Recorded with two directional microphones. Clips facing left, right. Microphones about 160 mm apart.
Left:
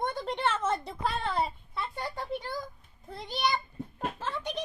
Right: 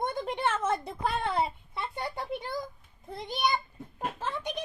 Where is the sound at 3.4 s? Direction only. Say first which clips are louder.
Even; 10° right (ahead or behind).